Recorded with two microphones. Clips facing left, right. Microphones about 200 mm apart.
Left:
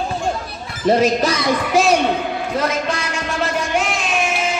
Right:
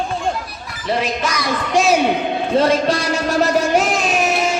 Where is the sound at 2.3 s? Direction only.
30° right (ahead or behind).